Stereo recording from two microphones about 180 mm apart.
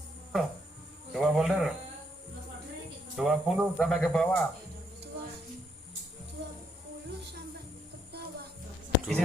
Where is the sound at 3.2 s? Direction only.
5° right (ahead or behind).